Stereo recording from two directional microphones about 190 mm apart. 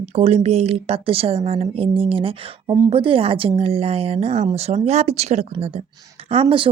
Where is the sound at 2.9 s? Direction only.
30° right (ahead or behind).